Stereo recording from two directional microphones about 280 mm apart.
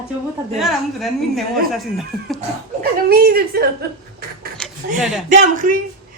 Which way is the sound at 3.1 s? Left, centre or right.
Right.